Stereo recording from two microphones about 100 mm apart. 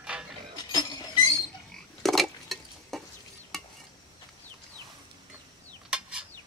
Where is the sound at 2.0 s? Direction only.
Centre (ahead or behind).